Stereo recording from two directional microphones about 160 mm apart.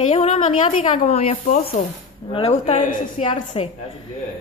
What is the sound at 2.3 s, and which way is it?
Speech, 35° left (ahead or behind).